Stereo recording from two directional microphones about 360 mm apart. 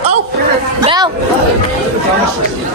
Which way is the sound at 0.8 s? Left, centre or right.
Centre.